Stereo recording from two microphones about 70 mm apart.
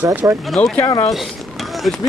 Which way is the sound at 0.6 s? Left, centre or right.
Centre.